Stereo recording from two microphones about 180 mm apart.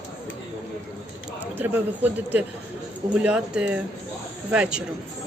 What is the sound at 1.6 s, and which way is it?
A man's voice, 10° right (ahead or behind).